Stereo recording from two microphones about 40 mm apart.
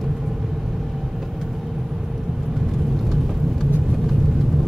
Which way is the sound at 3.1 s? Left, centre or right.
Centre.